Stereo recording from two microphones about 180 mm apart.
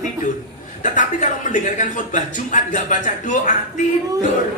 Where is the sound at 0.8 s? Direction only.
45° left (ahead or behind).